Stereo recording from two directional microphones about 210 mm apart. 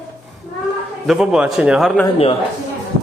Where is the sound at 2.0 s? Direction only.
25° left (ahead or behind).